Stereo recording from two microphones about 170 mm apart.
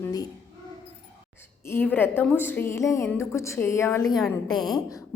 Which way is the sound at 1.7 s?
10° left (ahead or behind).